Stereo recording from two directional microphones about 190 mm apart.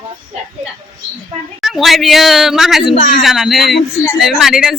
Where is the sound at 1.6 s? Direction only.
Centre (ahead or behind).